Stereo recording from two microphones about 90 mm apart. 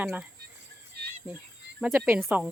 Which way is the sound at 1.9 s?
20° right (ahead or behind).